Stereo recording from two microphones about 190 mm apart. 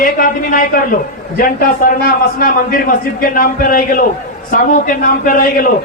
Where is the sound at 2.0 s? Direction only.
50° left (ahead or behind).